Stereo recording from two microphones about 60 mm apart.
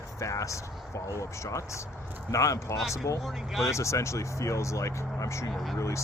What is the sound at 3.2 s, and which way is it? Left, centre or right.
Speech, centre.